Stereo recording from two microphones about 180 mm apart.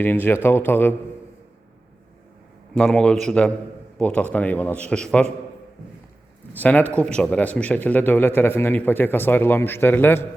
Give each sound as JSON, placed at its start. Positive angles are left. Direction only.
{"t": 0.0, "sound": "a man's voice", "side_deg": 10}
{"t": 2.7, "sound": "a man's voice", "side_deg": 5}
{"t": 6.6, "sound": "a man's voice", "side_deg": 10}